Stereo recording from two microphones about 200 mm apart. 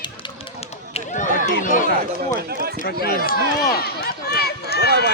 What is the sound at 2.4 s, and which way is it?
Speech, 50° right (ahead or behind).